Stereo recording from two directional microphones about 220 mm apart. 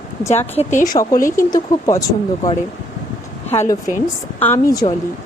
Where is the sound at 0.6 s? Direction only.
35° left (ahead or behind).